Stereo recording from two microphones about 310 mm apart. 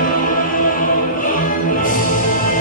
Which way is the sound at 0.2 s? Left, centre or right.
Left.